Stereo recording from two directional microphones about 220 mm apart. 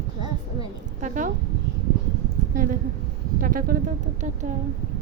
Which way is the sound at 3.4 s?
40° right (ahead or behind).